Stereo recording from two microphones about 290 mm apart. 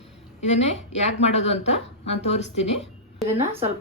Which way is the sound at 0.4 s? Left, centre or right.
Left.